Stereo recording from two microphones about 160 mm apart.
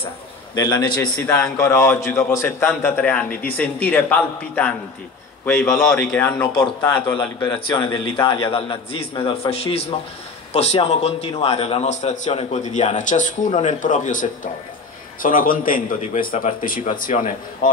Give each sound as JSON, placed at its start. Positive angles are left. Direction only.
{"t": 0.6, "sound": "a man's voice", "side_deg": 25}
{"t": 0.9, "sound": "a man's voice", "side_deg": 10}
{"t": 7.2, "sound": "a man's voice", "side_deg": 25}